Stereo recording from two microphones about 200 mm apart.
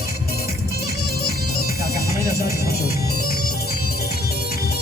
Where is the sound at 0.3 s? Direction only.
50° left (ahead or behind).